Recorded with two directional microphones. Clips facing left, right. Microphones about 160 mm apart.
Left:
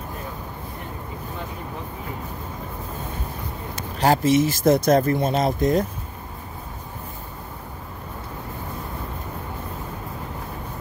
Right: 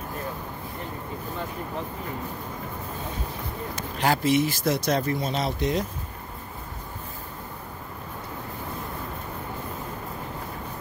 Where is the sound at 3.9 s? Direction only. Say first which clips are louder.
Left 4 dB; 40° left (ahead or behind).